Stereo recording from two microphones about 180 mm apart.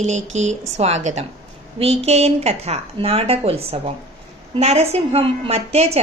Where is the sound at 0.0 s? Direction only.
40° right (ahead or behind).